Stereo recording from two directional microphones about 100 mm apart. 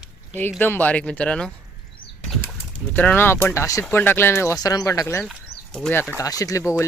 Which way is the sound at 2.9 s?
15° left (ahead or behind).